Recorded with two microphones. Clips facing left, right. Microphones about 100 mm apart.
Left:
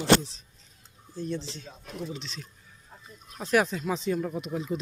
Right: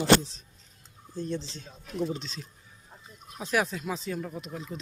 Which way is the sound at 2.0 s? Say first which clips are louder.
Right 6 dB; 35° right (ahead or behind).